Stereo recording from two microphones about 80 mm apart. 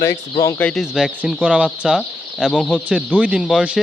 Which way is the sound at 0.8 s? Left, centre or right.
Centre.